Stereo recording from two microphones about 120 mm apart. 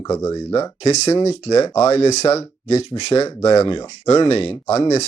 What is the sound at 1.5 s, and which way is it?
Speech, 30° left (ahead or behind).